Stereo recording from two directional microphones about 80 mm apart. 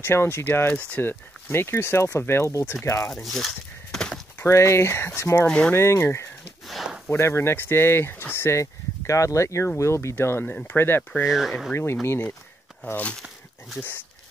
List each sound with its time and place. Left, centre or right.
0.0 s speech: left
3.2 s speech: centre
4.4 s speech: left
6.7 s a sound: centre
7.1 s speech: left
11.2 s speech: centre
11.7 s speech: left